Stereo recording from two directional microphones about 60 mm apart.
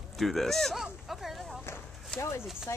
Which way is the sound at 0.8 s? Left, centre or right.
Centre.